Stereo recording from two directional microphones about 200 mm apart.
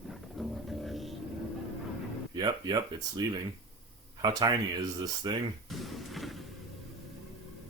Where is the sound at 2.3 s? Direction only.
20° right (ahead or behind).